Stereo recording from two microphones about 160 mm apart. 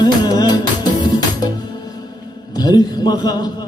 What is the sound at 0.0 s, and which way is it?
Music, 25° left (ahead or behind).